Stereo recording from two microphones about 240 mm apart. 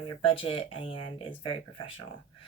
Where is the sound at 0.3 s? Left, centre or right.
Left.